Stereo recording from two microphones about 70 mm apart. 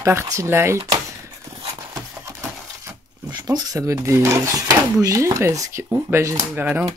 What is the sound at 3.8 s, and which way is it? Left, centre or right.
Speech, right.